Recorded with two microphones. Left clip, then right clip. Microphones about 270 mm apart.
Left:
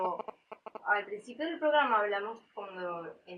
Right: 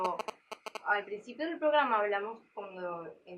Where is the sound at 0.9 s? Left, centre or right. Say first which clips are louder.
Left 1 dB; centre.